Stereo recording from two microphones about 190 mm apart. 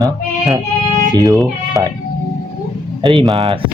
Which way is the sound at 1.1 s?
20° right (ahead or behind).